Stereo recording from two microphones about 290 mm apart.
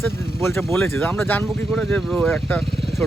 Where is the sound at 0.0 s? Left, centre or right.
Centre.